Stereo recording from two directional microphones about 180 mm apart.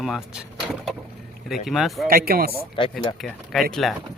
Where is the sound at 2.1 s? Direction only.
55° right (ahead or behind).